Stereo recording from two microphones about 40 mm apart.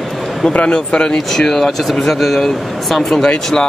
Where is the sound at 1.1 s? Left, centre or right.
Centre.